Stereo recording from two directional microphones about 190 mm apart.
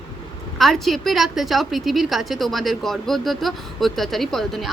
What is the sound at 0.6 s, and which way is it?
A woman's voice, centre (ahead or behind).